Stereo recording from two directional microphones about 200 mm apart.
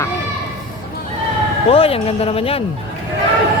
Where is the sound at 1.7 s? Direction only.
30° left (ahead or behind).